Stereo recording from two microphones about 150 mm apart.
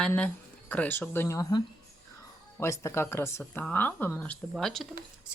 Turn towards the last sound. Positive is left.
turn(degrees=0)  # may be behind; listen again after turning